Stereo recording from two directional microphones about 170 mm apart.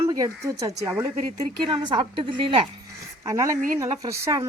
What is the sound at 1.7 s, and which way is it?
Speech, 25° right (ahead or behind).